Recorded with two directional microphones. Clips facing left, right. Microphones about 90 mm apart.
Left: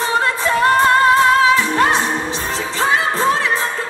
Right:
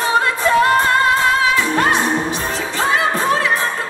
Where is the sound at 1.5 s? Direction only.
30° left (ahead or behind).